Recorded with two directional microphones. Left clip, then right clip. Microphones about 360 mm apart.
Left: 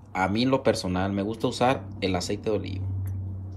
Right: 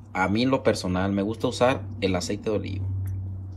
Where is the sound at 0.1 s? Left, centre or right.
Centre.